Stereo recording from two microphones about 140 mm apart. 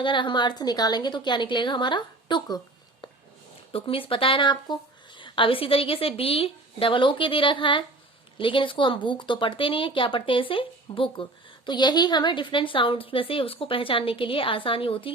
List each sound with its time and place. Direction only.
0.0 s speech: 35° left (ahead or behind)
3.7 s speech: 40° left (ahead or behind)